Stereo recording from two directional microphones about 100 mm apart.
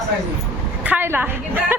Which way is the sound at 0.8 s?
20° right (ahead or behind).